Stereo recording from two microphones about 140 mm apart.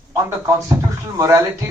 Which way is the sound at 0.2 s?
20° right (ahead or behind).